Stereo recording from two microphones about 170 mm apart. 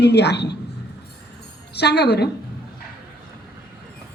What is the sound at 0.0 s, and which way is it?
Speech, 80° left.